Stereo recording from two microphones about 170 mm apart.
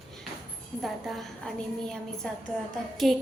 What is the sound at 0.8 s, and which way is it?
A woman's voice, centre (ahead or behind).